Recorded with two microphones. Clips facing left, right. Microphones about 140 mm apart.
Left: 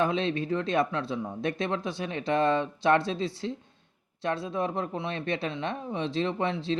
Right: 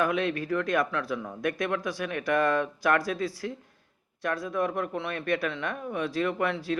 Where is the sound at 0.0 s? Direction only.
25° left (ahead or behind).